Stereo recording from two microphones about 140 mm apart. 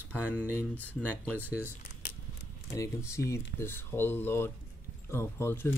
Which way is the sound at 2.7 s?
20° left (ahead or behind).